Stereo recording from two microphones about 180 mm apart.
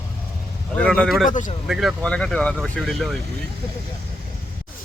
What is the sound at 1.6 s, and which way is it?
Speech, centre (ahead or behind).